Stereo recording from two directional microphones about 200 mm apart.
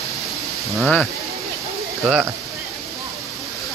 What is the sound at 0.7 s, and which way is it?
Speech, centre (ahead or behind).